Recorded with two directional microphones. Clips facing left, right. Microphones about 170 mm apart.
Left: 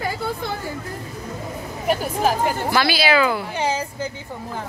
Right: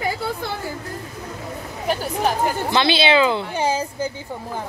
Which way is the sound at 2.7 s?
25° right (ahead or behind).